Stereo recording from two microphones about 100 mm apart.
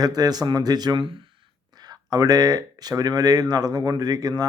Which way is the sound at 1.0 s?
60° right (ahead or behind).